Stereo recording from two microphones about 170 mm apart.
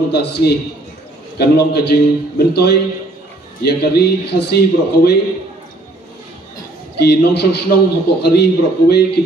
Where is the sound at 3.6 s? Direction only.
70° left (ahead or behind).